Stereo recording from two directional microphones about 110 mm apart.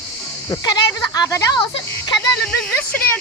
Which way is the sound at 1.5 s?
40° left (ahead or behind).